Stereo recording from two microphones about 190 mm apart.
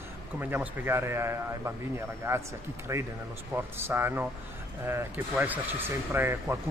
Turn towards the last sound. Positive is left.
turn(degrees=-15)  # may be behind; listen again after turning